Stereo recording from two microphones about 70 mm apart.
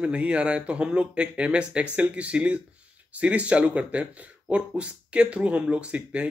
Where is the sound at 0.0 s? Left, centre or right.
Centre.